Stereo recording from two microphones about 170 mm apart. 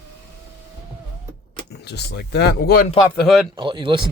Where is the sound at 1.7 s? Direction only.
80° left.